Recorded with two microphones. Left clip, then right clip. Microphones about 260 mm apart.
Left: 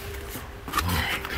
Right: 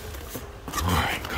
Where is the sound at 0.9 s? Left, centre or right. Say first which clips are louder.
Right 2 dB; centre.